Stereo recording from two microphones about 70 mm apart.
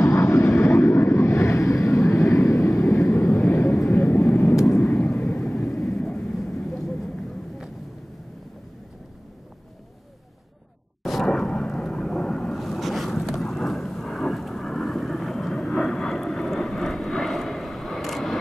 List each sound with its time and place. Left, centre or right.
0.0 s vehicle: left
4.7 s vehicle: left
5.9 s vehicle: centre
11.0 s vehicle: centre